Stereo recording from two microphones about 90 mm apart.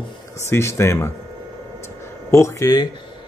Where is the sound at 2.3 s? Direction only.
35° left (ahead or behind).